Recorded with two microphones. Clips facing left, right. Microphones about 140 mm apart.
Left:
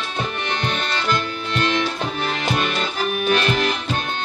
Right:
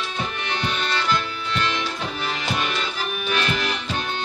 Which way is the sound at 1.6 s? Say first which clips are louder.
Left 5 dB; 50° left (ahead or behind).